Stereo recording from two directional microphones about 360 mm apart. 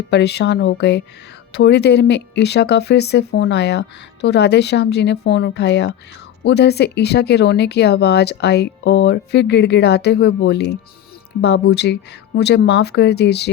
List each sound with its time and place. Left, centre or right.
0.1 s speech: left